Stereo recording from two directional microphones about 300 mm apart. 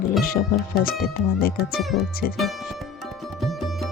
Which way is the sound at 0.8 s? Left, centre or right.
Left.